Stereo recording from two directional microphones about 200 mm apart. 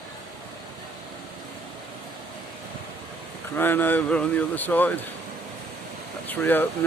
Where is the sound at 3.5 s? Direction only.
10° left (ahead or behind).